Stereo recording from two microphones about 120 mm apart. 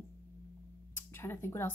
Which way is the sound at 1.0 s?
20° left (ahead or behind).